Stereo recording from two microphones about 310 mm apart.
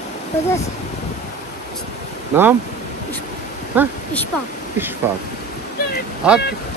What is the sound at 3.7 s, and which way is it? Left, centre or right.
Speech, centre.